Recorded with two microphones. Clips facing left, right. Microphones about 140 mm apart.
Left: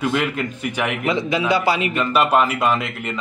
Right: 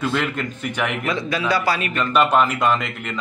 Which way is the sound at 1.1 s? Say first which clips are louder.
Left 4 dB; 20° left (ahead or behind).